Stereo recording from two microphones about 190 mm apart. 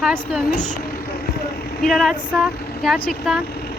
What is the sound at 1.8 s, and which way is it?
Speech, centre (ahead or behind).